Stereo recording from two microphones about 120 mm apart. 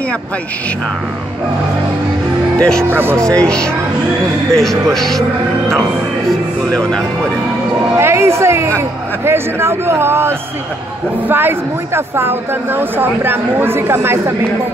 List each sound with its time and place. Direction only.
2.8 s speech: 20° right (ahead or behind)
3.2 s speech: 5° left (ahead or behind)
6.7 s speech: 5° left (ahead or behind)
7.9 s speech: 20° right (ahead or behind)